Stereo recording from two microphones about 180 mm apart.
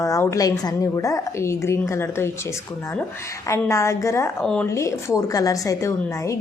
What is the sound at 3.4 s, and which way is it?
Speech, 15° left (ahead or behind).